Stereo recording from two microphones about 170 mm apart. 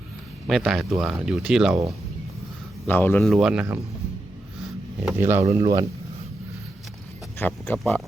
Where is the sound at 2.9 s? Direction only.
10° left (ahead or behind).